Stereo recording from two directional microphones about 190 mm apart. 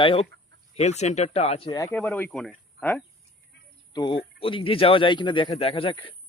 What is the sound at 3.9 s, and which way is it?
Speech, 25° left (ahead or behind).